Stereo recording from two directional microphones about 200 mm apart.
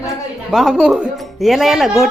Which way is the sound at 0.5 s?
Centre (ahead or behind).